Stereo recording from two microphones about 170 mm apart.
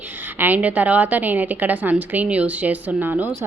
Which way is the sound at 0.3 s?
10° right (ahead or behind).